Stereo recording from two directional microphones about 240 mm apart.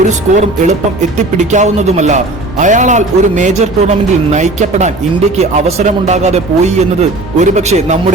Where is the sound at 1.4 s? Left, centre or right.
Right.